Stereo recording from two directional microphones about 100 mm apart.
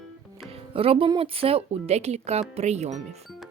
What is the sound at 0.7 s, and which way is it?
Speech, 70° right (ahead or behind).